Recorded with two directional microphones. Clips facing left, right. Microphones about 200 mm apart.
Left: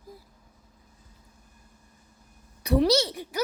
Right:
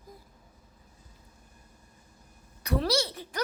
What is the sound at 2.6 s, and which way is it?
Speech, 20° left (ahead or behind).